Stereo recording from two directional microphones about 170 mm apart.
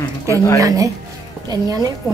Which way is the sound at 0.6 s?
20° right (ahead or behind).